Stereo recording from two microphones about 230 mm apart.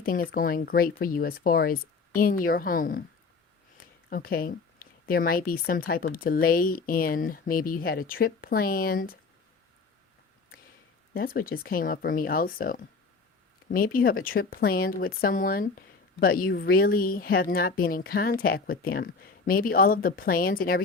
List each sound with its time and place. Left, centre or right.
0.0 s speech: left
4.1 s speech: left
11.1 s speech: left